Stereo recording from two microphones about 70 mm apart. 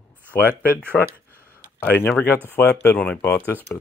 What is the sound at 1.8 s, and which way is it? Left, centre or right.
Speech, left.